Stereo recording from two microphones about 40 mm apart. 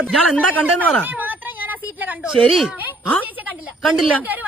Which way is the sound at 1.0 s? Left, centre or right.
Right.